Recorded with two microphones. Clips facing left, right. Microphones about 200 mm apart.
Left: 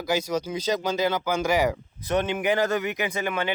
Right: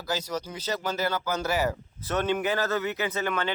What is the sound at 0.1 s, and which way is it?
Speech, 10° left (ahead or behind).